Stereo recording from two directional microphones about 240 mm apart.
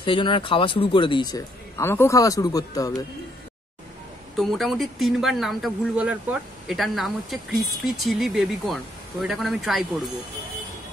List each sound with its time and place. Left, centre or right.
0.0 s a man's voice: left
4.4 s speech: centre